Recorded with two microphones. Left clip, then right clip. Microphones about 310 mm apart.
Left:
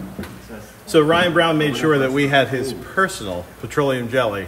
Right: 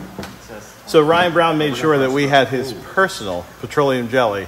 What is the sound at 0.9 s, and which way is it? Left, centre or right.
Speech, centre.